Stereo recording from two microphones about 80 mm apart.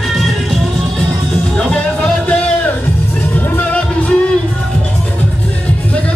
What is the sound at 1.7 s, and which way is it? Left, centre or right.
Music, centre.